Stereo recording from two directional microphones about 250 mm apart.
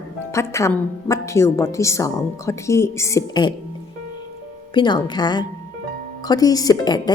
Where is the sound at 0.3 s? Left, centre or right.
Centre.